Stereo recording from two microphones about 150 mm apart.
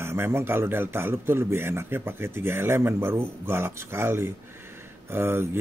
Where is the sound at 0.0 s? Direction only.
15° right (ahead or behind).